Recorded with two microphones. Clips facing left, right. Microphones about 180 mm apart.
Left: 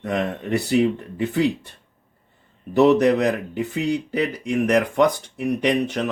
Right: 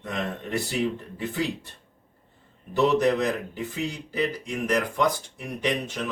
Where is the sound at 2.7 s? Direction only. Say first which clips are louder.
Left 6 dB; 70° left (ahead or behind).